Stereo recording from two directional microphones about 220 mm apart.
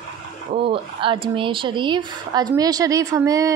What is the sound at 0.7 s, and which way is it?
A woman's voice, 25° right (ahead or behind).